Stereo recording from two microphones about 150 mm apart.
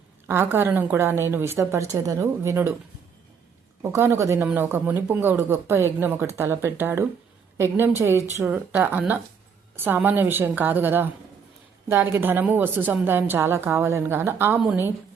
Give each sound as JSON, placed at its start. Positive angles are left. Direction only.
{"t": 0.3, "sound": "speech", "side_deg": -15}
{"t": 3.8, "sound": "speech", "side_deg": -15}